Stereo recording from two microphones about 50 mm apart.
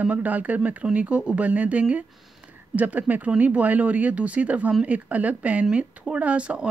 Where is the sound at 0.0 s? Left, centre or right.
Right.